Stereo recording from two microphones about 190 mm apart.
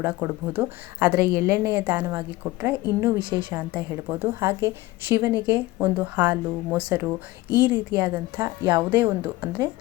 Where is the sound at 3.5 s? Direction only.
10° right (ahead or behind).